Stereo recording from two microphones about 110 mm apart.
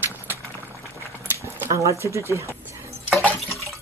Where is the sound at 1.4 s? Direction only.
30° right (ahead or behind).